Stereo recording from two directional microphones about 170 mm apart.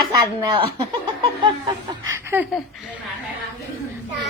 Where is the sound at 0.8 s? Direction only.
25° right (ahead or behind).